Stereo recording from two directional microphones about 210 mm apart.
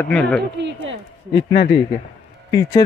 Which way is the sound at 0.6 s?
55° right (ahead or behind).